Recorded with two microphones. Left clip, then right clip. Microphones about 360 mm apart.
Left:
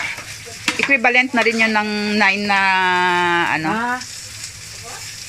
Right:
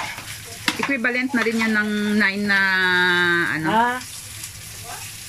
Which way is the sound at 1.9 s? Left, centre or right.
Left.